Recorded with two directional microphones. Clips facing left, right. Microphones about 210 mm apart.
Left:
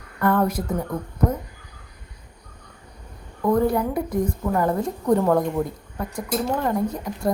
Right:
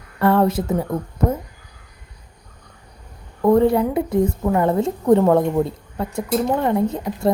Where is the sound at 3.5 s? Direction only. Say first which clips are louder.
Right 5 dB; 25° right (ahead or behind).